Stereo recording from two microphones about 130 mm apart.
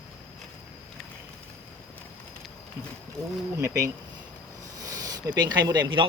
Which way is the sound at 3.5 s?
25° right (ahead or behind).